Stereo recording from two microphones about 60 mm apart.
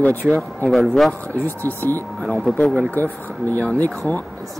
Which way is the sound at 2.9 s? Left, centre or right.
Left.